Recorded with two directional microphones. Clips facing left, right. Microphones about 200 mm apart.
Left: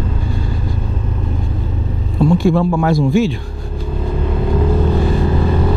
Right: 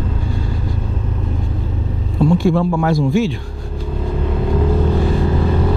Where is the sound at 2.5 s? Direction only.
25° left (ahead or behind).